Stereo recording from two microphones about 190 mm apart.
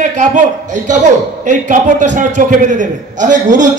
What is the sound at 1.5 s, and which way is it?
A man's voice, 40° right (ahead or behind).